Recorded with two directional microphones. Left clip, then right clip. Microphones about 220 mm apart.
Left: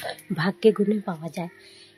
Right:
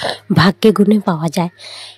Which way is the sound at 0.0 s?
50° right (ahead or behind).